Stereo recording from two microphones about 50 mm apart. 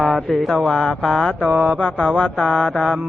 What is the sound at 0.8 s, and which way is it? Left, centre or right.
Speech, centre.